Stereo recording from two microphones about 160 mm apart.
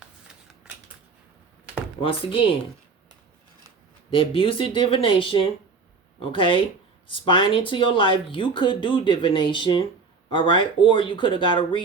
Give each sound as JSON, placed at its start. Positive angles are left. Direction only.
{"t": 2.0, "sound": "speech", "side_deg": 35}
{"t": 4.1, "sound": "speech", "side_deg": 35}